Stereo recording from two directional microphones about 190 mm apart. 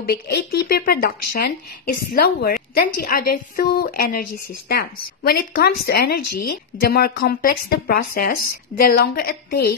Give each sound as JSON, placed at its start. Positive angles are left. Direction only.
{"t": 0.0, "sound": "a woman's voice", "side_deg": 55}